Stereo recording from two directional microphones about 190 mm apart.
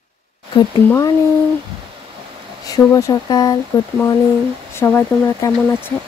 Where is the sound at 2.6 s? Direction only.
20° left (ahead or behind).